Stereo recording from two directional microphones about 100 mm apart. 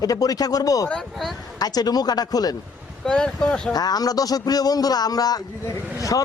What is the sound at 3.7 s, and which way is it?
Speech, 40° left (ahead or behind).